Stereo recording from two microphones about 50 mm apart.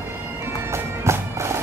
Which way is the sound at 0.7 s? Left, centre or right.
Right.